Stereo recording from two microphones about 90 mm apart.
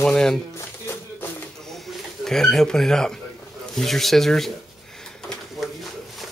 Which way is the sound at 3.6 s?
5° left (ahead or behind).